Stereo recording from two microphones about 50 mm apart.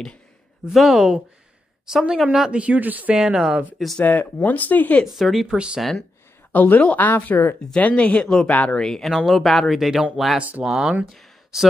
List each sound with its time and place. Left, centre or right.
0.7 s speech: centre
2.5 s speech: right
3.2 s speech: centre
3.7 s speech: centre
4.0 s speech: left
5.0 s speech: centre
5.5 s speech: centre
6.5 s speech: left
7.7 s speech: left
8.5 s speech: left
8.7 s speech: centre
9.1 s speech: centre
11.1 s a sound: centre